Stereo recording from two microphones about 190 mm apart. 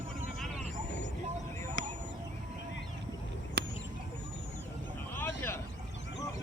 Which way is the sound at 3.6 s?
60° right (ahead or behind).